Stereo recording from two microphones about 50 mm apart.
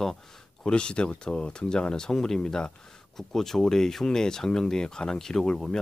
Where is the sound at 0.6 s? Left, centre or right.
Centre.